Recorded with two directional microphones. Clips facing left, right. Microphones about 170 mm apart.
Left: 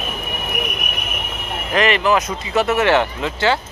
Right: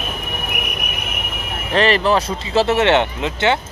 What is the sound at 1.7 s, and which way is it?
Speech, 30° right (ahead or behind).